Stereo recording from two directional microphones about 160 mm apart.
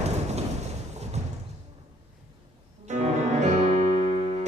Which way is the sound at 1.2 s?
45° right (ahead or behind).